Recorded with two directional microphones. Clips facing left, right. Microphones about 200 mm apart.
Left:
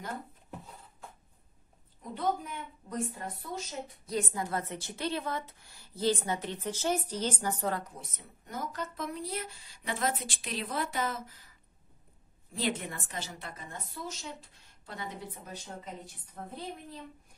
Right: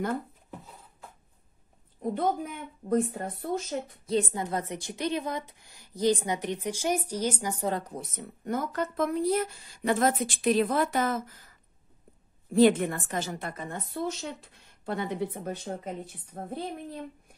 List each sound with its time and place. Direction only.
2.0 s speech: 55° right (ahead or behind)
4.0 s a woman's voice: 25° right (ahead or behind)
7.9 s speech: 55° right (ahead or behind)
12.5 s speech: 50° right (ahead or behind)